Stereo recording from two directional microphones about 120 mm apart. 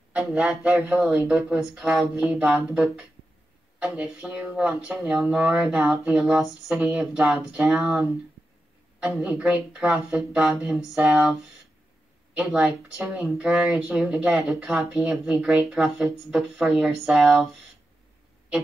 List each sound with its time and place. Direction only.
0.1 s speech: 10° right (ahead or behind)
12.4 s speech: 5° right (ahead or behind)